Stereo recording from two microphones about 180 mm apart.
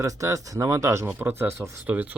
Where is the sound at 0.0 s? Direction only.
15° right (ahead or behind).